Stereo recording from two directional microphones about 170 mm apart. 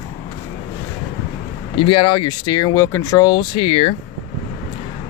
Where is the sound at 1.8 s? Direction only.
30° left (ahead or behind).